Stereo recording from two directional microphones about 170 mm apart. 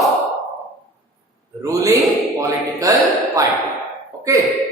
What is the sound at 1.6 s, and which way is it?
Speech, 20° right (ahead or behind).